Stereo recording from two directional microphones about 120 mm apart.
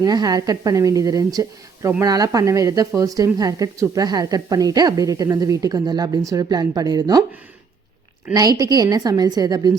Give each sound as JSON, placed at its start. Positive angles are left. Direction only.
{"t": 0.0, "sound": "a woman's voice", "side_deg": -30}
{"t": 8.3, "sound": "a woman's voice", "side_deg": -30}